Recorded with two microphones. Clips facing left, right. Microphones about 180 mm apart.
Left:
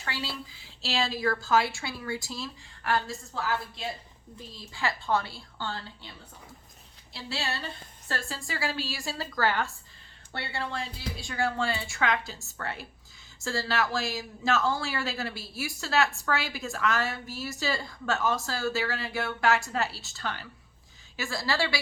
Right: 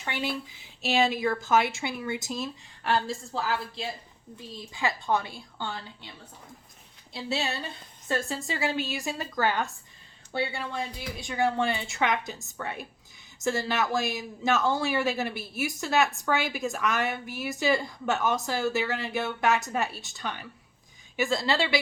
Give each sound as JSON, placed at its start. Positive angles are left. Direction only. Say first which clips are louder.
{"t": 0.0, "sound": "a man's voice", "louder": "right 4 dB", "side_deg": -20}
{"t": 7.1, "sound": "a man's voice", "louder": "right 4 dB", "side_deg": -20}